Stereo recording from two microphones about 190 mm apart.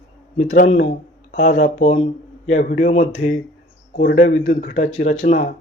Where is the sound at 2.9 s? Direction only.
35° left (ahead or behind).